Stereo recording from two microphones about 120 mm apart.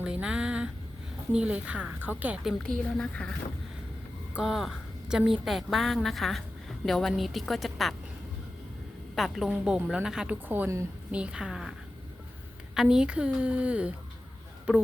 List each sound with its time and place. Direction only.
0.0 s a sound: 10° right (ahead or behind)
1.3 s a woman's voice: 10° right (ahead or behind)
2.4 s a woman's voice: centre (ahead or behind)
4.4 s a woman's voice: 5° right (ahead or behind)
9.1 s a woman's voice: centre (ahead or behind)
10.5 s a woman's voice: 20° right (ahead or behind)
11.1 s a woman's voice: 10° right (ahead or behind)
12.7 s a woman's voice: 5° right (ahead or behind)